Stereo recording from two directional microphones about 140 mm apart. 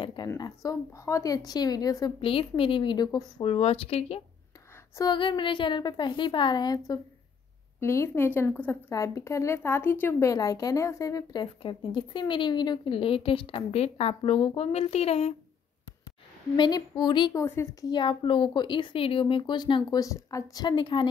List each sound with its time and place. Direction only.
0.0 s a sound: 35° left (ahead or behind)
0.4 s a woman's voice: 25° left (ahead or behind)
2.2 s speech: 40° left (ahead or behind)
3.4 s speech: 45° left (ahead or behind)
4.9 s speech: 30° left (ahead or behind)
7.8 s a woman's voice: 20° left (ahead or behind)
11.6 s speech: 35° left (ahead or behind)
16.5 s speech: 30° left (ahead or behind)
17.3 s speech: 20° left (ahead or behind)